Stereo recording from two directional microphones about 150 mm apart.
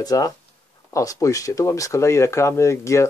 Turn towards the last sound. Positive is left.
turn(degrees=20)  # may be behind; listen again after turning